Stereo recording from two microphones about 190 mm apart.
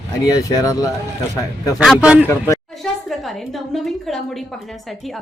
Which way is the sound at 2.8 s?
5° left (ahead or behind).